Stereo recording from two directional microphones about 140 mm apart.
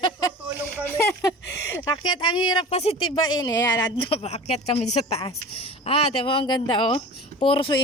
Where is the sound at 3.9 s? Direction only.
45° left (ahead or behind).